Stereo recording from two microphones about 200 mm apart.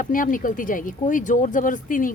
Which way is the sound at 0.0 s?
45° left (ahead or behind).